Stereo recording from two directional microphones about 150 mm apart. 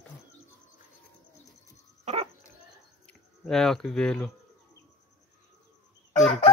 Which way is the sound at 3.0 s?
5° left (ahead or behind).